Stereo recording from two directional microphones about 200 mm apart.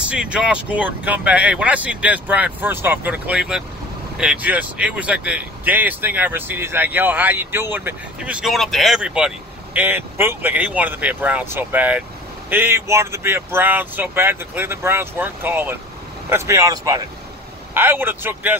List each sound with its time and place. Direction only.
0.1 s speech: 5° right (ahead or behind)